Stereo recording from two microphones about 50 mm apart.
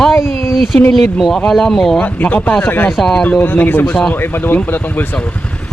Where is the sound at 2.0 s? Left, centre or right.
Left.